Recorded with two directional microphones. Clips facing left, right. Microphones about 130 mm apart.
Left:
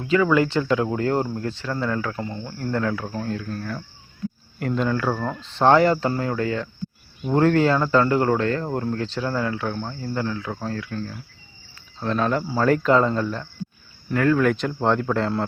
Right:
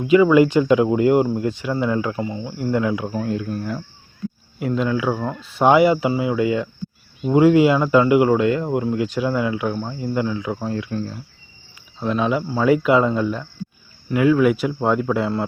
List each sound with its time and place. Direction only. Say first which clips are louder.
0.0 s speech: right 6 dB; 15° right (ahead or behind)
4.6 s speech: right 2 dB; centre (ahead or behind); by 11.2 s 20° right (ahead or behind)
11.9 s speech: right 2 dB; 5° right (ahead or behind)